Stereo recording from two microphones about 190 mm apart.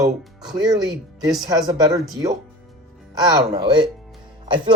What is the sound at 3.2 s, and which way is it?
Speech, 20° right (ahead or behind).